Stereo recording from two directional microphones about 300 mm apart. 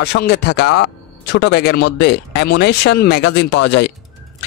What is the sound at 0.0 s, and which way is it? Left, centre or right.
Speech, left.